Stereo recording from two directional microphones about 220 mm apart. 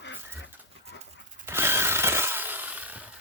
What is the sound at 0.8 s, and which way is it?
Dog, 30° right (ahead or behind).